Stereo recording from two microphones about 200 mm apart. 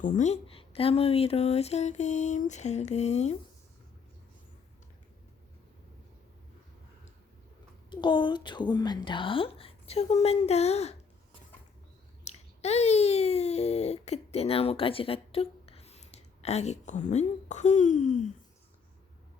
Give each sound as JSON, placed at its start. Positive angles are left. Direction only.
{"t": 0.0, "sound": "speech", "side_deg": 40}
{"t": 7.9, "sound": "a woman's voice", "side_deg": 20}
{"t": 12.2, "sound": "speech", "side_deg": 35}